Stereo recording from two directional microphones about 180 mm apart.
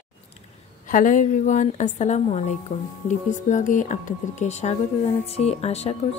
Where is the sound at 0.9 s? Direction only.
45° left (ahead or behind).